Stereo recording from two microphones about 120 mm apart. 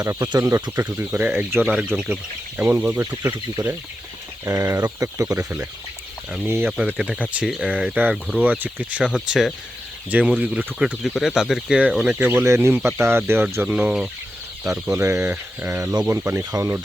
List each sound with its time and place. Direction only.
0.0 s speech: 30° right (ahead or behind)
6.8 s speech: 10° right (ahead or behind)
14.9 s speech: 25° right (ahead or behind)
15.8 s speech: 30° right (ahead or behind)